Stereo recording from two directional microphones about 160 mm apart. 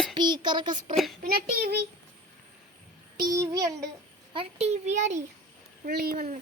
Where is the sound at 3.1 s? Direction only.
20° right (ahead or behind).